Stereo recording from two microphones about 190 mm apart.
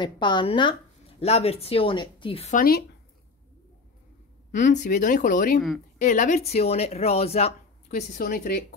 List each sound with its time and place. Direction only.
0.0 s speech: 25° left (ahead or behind)
2.5 s speech: 50° left (ahead or behind)
4.6 s speech: 40° left (ahead or behind)